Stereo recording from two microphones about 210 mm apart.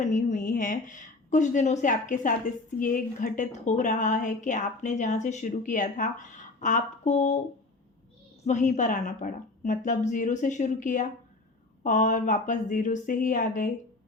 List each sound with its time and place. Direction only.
0.0 s a woman's voice: 35° left (ahead or behind)
8.4 s a woman's voice: 35° left (ahead or behind)